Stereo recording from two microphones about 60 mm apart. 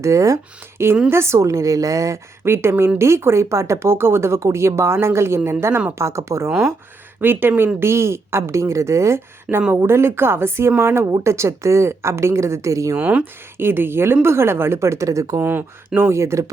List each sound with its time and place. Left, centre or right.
0.0 s a woman's voice: right
0.8 s a woman's voice: right
2.4 s a woman's voice: right
7.2 s speech: right
9.5 s speech: centre
9.8 s speech: right
11.0 s speech: right
13.0 s speech: right
13.6 s speech: right
16.0 s speech: right